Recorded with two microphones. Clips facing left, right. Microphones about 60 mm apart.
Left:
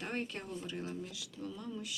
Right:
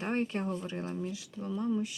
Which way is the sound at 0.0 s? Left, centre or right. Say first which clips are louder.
Right 8 dB; right.